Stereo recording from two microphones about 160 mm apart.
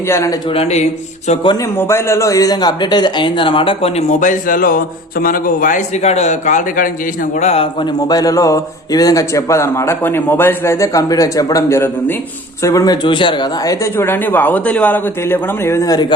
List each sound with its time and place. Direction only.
0.1 s speech: 20° left (ahead or behind)
0.5 s speech: 40° left (ahead or behind)
1.8 s speech: 15° left (ahead or behind); by 4.0 s 35° left (ahead or behind)
4.2 s a man's voice: 55° left (ahead or behind)
7.3 s speech: 40° left (ahead or behind)
8.0 s speech: 25° left (ahead or behind)